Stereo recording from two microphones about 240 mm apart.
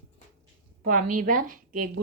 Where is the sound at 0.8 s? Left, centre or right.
Right.